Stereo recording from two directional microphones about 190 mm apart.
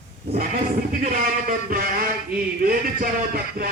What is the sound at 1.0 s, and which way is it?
A man's voice, 45° right (ahead or behind).